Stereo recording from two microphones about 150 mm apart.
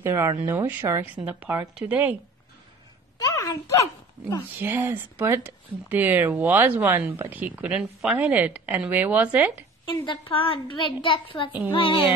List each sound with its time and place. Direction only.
0.0 s speech: 15° right (ahead or behind)
3.2 s a sound: 20° left (ahead or behind)
4.6 s speech: 15° right (ahead or behind)
9.8 s a woman's voice: 35° left (ahead or behind)